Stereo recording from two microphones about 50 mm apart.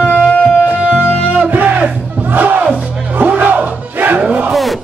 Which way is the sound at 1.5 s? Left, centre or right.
Right.